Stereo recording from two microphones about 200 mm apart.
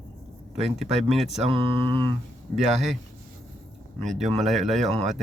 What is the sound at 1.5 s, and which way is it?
Mantra, 25° right (ahead or behind).